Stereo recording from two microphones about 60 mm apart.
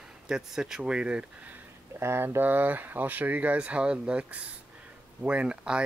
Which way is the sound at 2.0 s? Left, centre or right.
Right.